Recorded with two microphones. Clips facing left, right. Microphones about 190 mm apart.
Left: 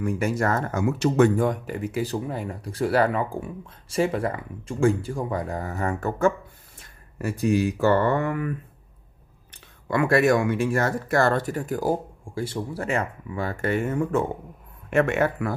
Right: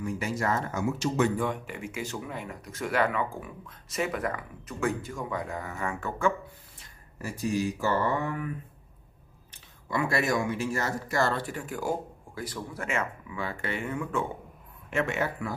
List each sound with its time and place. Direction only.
0.0 s speech: 50° left (ahead or behind)
6.8 s speech: 60° left (ahead or behind)
9.8 s speech: 60° left (ahead or behind); by 14.2 s 40° left (ahead or behind)
14.9 s speech: 55° left (ahead or behind)